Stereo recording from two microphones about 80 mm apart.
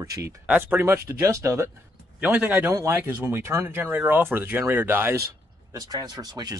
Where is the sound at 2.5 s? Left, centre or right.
Right.